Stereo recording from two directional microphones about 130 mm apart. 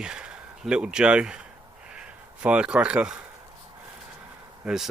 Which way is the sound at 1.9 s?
10° right (ahead or behind).